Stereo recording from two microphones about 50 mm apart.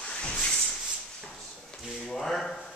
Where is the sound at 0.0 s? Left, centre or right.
Centre.